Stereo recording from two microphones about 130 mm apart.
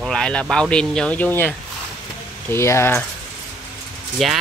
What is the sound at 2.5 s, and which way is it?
Speech, 20° left (ahead or behind).